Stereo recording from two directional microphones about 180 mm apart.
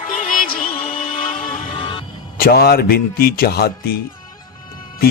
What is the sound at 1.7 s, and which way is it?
Music, 30° left (ahead or behind).